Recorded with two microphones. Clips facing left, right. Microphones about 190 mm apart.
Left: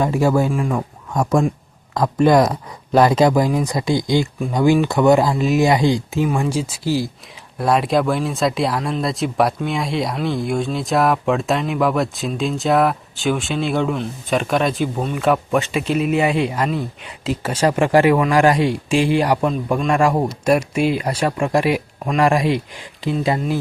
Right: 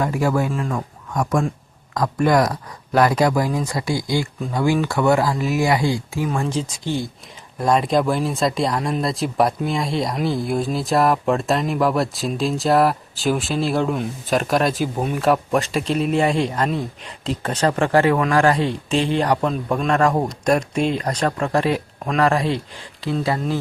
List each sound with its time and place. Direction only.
0.0 s speech: 25° left (ahead or behind)
0.5 s speech: 10° left (ahead or behind)
1.1 s speech: 25° left (ahead or behind)